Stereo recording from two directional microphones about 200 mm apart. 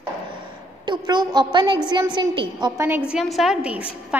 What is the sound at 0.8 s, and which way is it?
A woman's voice, 20° right (ahead or behind).